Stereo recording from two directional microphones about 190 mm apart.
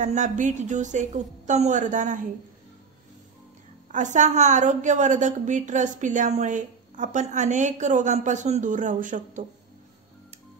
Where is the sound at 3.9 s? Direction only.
40° right (ahead or behind).